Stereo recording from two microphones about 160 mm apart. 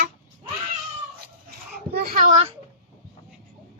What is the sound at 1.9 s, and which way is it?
Speech, 70° right (ahead or behind).